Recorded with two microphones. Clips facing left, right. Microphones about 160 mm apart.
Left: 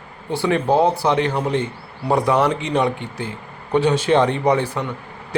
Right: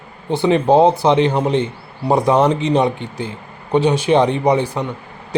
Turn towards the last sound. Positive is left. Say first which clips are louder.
# right 2 dB
turn(degrees=-15)  # may be behind; listen again after turning